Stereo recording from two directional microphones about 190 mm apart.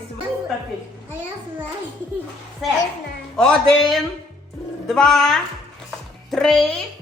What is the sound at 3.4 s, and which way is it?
A man's voice, 5° left (ahead or behind).